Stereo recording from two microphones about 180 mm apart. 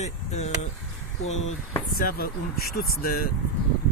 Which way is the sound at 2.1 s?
55° left (ahead or behind).